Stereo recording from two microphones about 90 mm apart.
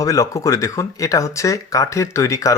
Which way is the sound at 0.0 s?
40° left (ahead or behind).